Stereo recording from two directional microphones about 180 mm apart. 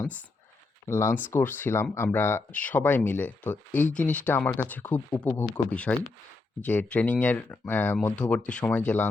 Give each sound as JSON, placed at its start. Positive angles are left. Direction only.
{"t": 0.9, "sound": "speech", "side_deg": 15}